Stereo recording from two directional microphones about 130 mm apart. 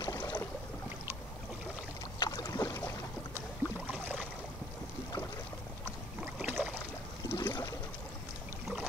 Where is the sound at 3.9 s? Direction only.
15° right (ahead or behind).